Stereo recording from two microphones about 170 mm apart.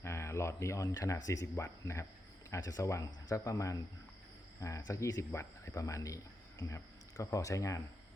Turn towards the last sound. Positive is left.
turn(degrees=20)  # may be behind; listen again after turning